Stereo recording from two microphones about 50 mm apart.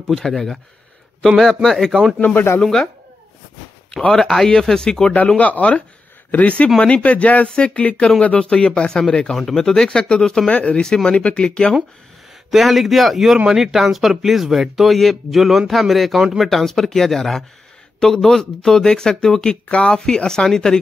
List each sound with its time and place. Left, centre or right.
0.1 s speech: centre
2.1 s speech: left
2.6 s speech: centre
4.1 s speech: centre
5.4 s speech: left
12.4 s speech: centre